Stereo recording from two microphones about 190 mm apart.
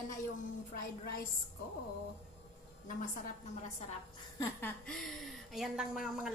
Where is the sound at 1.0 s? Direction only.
50° left (ahead or behind).